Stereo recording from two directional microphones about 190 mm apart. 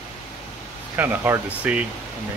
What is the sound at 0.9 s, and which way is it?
Speech, 10° right (ahead or behind).